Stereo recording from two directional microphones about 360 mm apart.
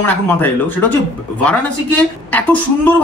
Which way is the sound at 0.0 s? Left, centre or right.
Centre.